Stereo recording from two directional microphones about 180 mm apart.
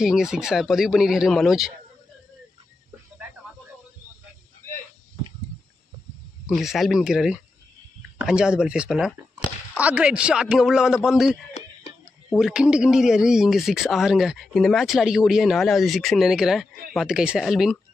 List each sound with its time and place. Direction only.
0.0 s speech: 5° right (ahead or behind)
6.4 s speech: centre (ahead or behind)
11.6 s a sound: 40° left (ahead or behind)
12.4 s speech: 5° right (ahead or behind)